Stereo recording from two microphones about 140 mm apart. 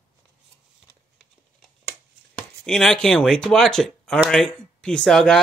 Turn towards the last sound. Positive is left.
turn(degrees=5)  # may be behind; listen again after turning